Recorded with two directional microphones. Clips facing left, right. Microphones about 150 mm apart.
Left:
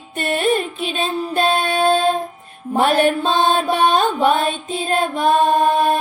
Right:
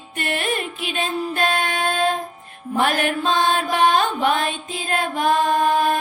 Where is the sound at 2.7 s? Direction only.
30° left (ahead or behind).